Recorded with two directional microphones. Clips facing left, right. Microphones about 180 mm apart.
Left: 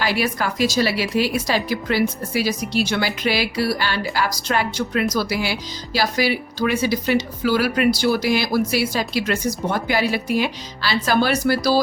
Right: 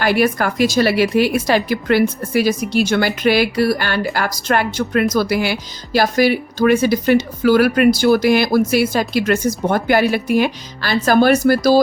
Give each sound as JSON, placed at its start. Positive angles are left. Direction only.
{"t": 0.0, "sound": "speech", "side_deg": -55}